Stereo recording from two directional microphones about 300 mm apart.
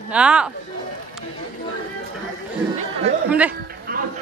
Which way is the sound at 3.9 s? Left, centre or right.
Right.